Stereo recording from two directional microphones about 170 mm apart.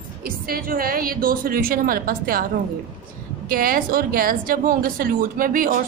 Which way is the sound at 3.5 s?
55° right (ahead or behind).